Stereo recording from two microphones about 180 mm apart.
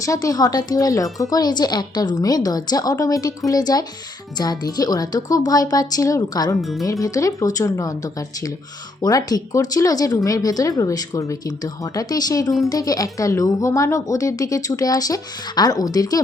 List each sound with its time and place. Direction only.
0.0 s speech: 20° left (ahead or behind)
6.6 s speech: centre (ahead or behind)
6.8 s speech: 20° left (ahead or behind)